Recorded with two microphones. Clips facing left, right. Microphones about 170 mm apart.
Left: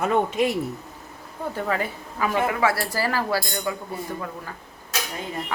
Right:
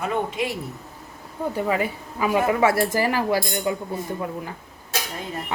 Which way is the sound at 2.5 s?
25° right (ahead or behind).